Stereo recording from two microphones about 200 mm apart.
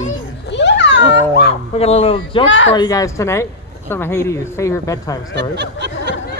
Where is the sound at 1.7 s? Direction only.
30° left (ahead or behind).